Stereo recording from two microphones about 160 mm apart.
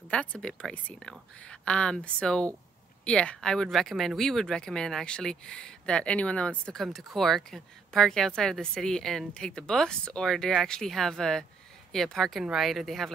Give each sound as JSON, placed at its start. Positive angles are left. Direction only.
{"t": 0.1, "sound": "speech", "side_deg": 5}